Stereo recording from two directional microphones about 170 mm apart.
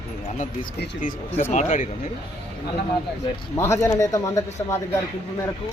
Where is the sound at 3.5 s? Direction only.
15° left (ahead or behind).